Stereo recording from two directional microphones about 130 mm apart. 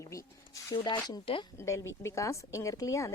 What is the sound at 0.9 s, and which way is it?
Speech, 35° left (ahead or behind).